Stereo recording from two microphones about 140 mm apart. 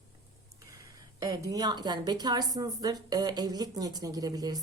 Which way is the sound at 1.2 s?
25° right (ahead or behind).